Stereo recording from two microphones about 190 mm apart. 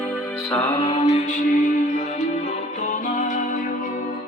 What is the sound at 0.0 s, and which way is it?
Music, 5° left (ahead or behind).